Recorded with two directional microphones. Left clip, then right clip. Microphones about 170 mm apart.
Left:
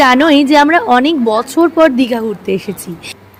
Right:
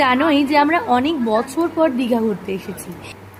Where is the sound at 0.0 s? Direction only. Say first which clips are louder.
Left 7 dB; 45° left (ahead or behind).